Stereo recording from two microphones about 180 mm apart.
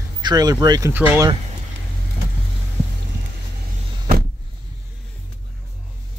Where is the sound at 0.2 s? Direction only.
20° right (ahead or behind).